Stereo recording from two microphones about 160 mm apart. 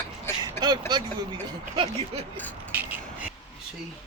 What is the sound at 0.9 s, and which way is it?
Speech, 30° right (ahead or behind).